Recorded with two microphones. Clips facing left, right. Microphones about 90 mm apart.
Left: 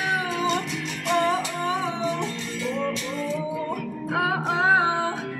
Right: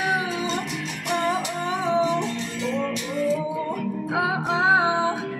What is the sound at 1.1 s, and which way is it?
Music, 20° right (ahead or behind).